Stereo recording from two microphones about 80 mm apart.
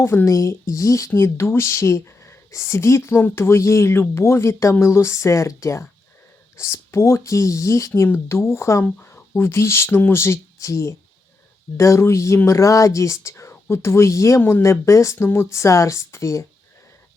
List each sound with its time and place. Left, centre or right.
0.0 s speech: left